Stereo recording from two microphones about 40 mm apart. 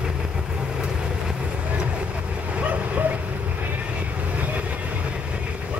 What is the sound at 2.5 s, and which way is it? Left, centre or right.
Dog, right.